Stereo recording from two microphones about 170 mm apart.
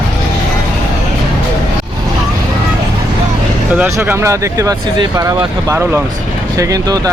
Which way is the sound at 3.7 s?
10° right (ahead or behind).